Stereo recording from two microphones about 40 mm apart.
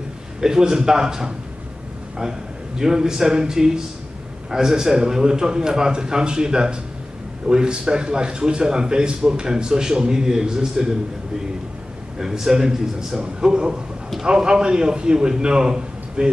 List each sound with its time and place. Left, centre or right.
0.4 s a man's voice: centre
2.8 s a man's voice: centre
12.2 s a man's voice: centre